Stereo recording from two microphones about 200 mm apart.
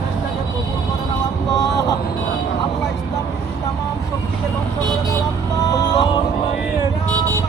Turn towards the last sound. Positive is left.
turn(degrees=20)  # may be behind; listen again after turning